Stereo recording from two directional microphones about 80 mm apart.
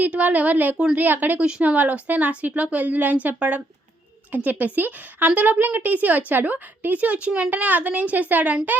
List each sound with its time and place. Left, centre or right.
0.0 s a woman's voice: centre